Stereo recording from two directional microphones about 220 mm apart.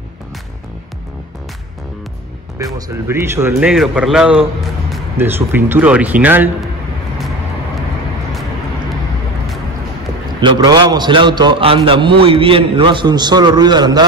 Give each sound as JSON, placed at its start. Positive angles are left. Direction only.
{"t": 2.9, "sound": "a man's voice", "side_deg": -10}
{"t": 10.4, "sound": "a man's voice", "side_deg": -20}